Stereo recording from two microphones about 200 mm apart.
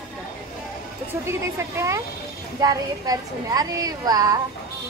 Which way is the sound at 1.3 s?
15° right (ahead or behind).